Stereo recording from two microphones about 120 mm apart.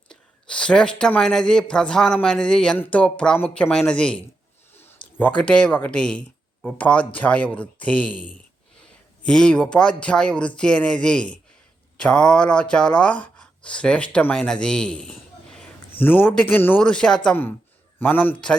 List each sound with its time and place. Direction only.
0.1 s speech: 10° left (ahead or behind)
16.0 s speech: 15° left (ahead or behind)